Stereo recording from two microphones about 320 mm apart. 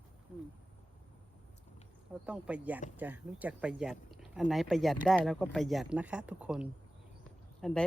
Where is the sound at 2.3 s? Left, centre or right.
Centre.